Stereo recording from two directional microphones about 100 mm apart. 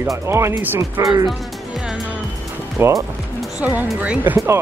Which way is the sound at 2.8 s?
20° right (ahead or behind).